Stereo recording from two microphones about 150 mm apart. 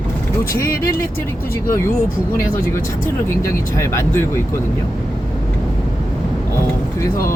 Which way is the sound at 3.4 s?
20° left (ahead or behind).